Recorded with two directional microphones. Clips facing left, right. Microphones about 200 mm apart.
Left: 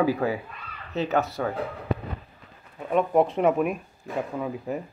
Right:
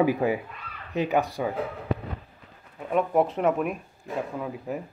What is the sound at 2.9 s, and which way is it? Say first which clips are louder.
Speech: left 2 dB; 5° right (ahead or behind).